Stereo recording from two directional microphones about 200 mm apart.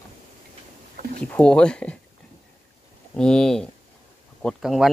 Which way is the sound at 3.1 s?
5° left (ahead or behind).